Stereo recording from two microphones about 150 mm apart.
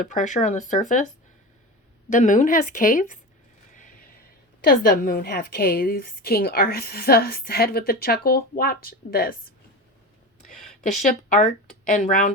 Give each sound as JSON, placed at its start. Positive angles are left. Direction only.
{"t": 0.0, "sound": "speech", "side_deg": 60}
{"t": 3.8, "sound": "a sound", "side_deg": 65}
{"t": 4.6, "sound": "a woman's voice", "side_deg": 80}
{"t": 10.9, "sound": "speech", "side_deg": 55}